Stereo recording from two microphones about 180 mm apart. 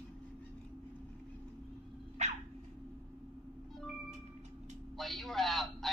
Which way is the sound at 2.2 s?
40° right (ahead or behind).